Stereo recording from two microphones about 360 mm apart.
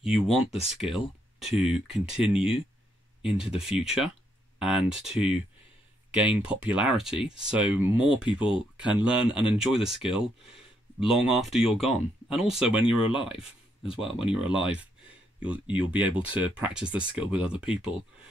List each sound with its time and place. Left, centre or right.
0.0 s speech: centre
6.1 s speech: centre
13.1 s speech: centre
14.3 s speech: centre